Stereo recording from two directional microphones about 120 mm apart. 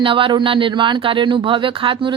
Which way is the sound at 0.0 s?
45° right (ahead or behind).